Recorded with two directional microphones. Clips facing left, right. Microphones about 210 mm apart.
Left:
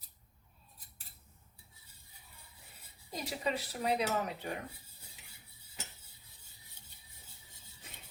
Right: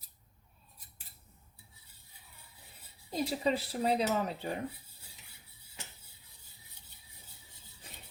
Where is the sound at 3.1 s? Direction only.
30° right (ahead or behind).